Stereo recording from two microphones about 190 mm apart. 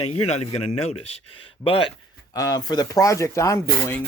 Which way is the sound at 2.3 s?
20° left (ahead or behind).